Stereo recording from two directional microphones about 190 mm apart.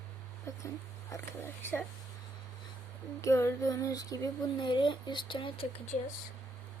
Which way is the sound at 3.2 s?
15° left (ahead or behind).